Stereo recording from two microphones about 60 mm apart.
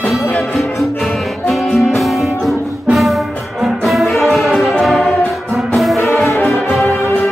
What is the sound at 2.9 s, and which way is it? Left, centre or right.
Brass instrument, centre.